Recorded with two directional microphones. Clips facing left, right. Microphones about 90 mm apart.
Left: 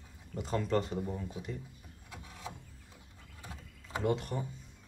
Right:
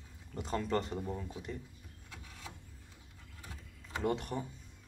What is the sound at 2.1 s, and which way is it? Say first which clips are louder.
Vehicle: left 5 dB; 20° left (ahead or behind).